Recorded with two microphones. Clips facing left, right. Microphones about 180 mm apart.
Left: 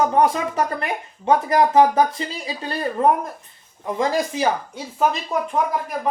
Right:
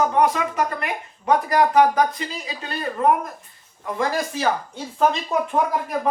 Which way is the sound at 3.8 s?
20° left (ahead or behind).